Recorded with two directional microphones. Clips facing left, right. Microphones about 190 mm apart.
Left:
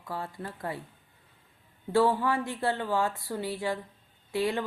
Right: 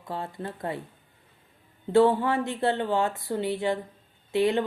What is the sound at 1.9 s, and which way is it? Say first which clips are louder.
Speech: right 4 dB; 20° right (ahead or behind).